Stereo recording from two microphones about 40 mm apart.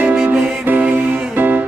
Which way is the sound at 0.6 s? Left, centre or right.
Right.